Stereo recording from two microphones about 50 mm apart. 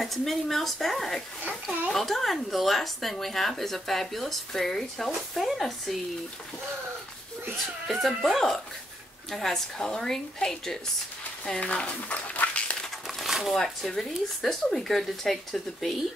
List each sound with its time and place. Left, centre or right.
0.0 s speech: centre
7.9 s a woman's voice: centre
11.6 s speech: left
12.4 s a sound: left
13.0 s speech: centre